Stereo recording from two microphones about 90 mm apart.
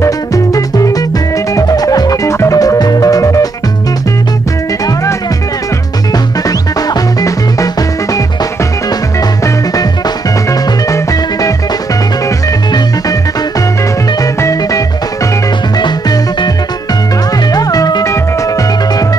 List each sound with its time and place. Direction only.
0.0 s music: 40° left (ahead or behind)
6.9 s music: 45° left (ahead or behind)
10.9 s music: 40° left (ahead or behind)
14.2 s music: 35° left (ahead or behind)
15.8 s music: 55° left (ahead or behind)
17.5 s music: 45° left (ahead or behind)